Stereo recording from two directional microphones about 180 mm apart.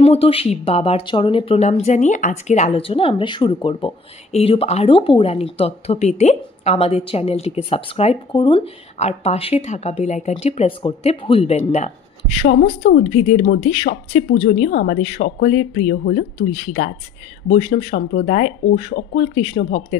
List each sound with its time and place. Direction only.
0.0 s speech: 35° left (ahead or behind)
12.6 s a woman's voice: 80° left
13.0 s speech: 40° left (ahead or behind)
15.0 s speech: 50° left (ahead or behind)
17.5 s speech: 30° left (ahead or behind)
17.9 s speech: 45° left (ahead or behind)
19.1 s speech: 35° left (ahead or behind)